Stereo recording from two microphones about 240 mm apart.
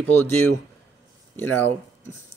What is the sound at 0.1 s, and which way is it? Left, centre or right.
Speech, centre.